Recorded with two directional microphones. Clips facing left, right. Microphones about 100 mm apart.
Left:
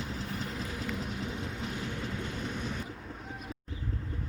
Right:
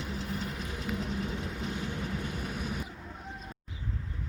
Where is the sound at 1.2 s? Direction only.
20° left (ahead or behind).